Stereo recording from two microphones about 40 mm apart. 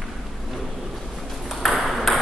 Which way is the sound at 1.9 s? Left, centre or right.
Centre.